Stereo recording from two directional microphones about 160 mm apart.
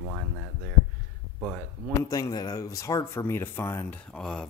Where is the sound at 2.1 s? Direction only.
25° left (ahead or behind).